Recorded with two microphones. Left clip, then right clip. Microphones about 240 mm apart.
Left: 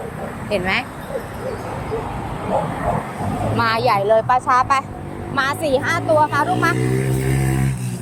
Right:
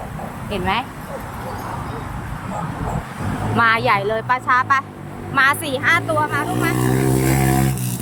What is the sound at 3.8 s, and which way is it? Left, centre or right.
Speech, centre.